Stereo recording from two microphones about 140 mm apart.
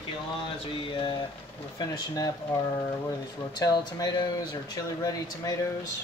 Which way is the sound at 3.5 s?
30° left (ahead or behind).